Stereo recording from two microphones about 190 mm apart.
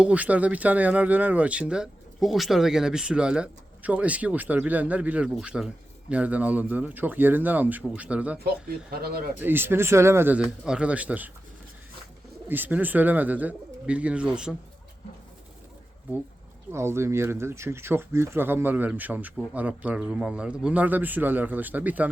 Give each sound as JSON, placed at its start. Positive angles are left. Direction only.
{"t": 0.0, "sound": "speech", "side_deg": -5}
{"t": 8.9, "sound": "speech", "side_deg": -55}
{"t": 9.4, "sound": "speech", "side_deg": -10}
{"t": 12.5, "sound": "speech", "side_deg": -10}
{"t": 16.7, "sound": "speech", "side_deg": -15}